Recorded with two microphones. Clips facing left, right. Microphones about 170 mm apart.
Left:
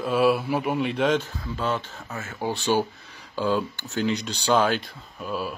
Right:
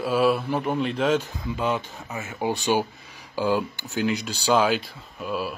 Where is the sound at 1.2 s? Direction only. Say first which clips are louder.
Right 2 dB; 15° right (ahead or behind).